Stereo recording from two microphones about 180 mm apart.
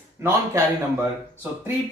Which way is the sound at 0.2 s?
15° right (ahead or behind).